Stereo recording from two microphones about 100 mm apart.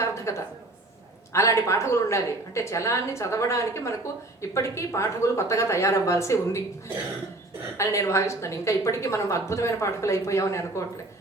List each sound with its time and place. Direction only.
0.0 s a woman's voice: 30° left (ahead or behind)
7.8 s speech: 30° left (ahead or behind)